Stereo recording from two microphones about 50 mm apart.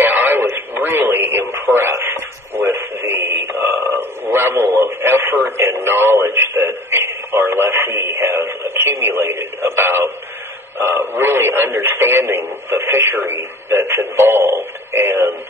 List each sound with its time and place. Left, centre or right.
0.0 s radio: right
2.5 s radio: right
5.6 s a sound: right
6.9 s radio: right
8.2 s radio: right
8.5 s radio: right
10.8 s speech: right